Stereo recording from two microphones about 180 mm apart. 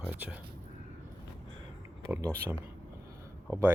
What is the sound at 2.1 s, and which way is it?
Speech, 15° right (ahead or behind).